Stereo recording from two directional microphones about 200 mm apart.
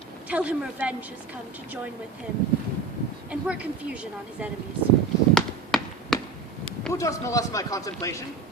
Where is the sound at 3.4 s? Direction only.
5° right (ahead or behind).